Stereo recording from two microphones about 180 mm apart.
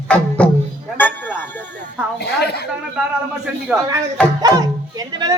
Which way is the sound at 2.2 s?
65° left (ahead or behind).